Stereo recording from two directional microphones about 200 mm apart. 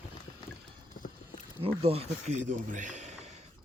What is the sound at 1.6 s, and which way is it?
A man's voice, 30° right (ahead or behind).